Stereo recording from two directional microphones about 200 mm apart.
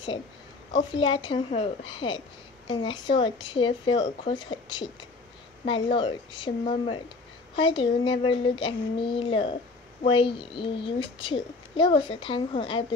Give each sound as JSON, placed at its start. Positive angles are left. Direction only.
{"t": 0.7, "sound": "a child's voice", "side_deg": 25}